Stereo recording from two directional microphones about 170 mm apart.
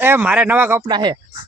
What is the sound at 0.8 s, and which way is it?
Speech, 25° right (ahead or behind).